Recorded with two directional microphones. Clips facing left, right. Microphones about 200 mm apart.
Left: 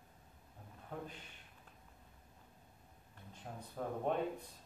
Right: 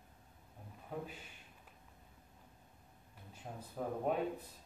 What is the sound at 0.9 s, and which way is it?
Speech, 5° right (ahead or behind).